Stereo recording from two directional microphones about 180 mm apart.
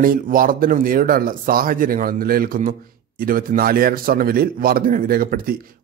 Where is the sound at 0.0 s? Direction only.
50° right (ahead or behind).